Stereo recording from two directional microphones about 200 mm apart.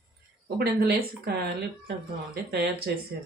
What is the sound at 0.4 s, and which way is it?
Speech, 55° right (ahead or behind).